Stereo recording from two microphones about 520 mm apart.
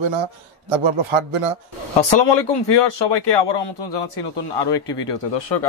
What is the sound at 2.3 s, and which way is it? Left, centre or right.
A man's voice, left.